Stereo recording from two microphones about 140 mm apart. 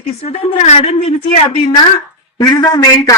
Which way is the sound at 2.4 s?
30° left (ahead or behind).